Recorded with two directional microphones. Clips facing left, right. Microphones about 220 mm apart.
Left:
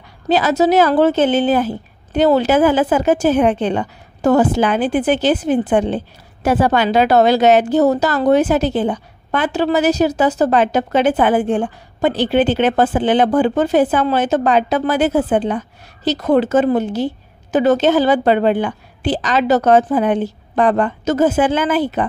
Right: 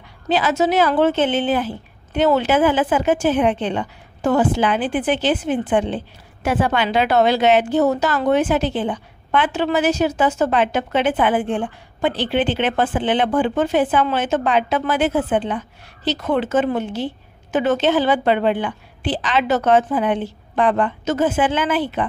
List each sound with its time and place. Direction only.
0.3 s a woman's voice: 40° left (ahead or behind)